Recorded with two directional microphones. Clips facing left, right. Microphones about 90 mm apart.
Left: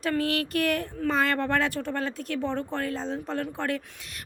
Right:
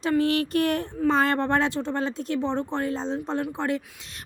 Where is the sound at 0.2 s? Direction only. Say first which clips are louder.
Right 4 dB; 30° right (ahead or behind).